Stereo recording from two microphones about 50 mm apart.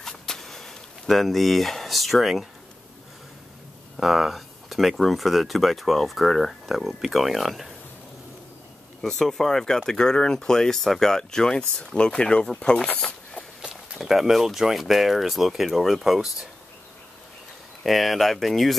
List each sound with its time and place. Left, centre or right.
0.0 s a sound: centre
3.9 s speech: centre
9.0 s speech: centre
13.0 s a sound: centre
13.9 s speech: centre
17.8 s speech: centre